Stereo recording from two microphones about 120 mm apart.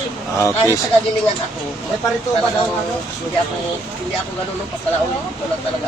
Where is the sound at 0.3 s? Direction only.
25° left (ahead or behind).